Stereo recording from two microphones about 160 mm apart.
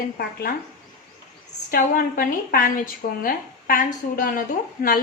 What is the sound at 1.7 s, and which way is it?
A woman's voice, 60° left (ahead or behind).